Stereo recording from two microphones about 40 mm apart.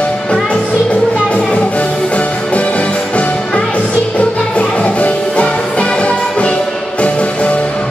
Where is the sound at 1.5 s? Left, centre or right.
Left.